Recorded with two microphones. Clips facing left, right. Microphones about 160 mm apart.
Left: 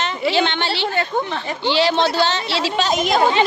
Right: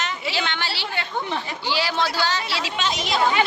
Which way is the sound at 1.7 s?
25° left (ahead or behind).